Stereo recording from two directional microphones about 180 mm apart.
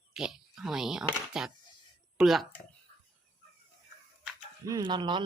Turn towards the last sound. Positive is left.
turn(degrees=-25)  # may be behind; listen again after turning